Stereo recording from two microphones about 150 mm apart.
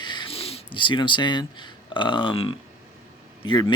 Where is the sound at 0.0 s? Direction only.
30° left (ahead or behind).